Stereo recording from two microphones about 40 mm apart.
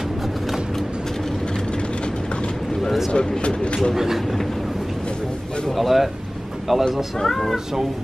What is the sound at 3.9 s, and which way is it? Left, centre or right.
Speech, centre.